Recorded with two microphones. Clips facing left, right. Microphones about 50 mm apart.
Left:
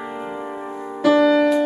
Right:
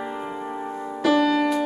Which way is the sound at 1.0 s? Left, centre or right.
Centre.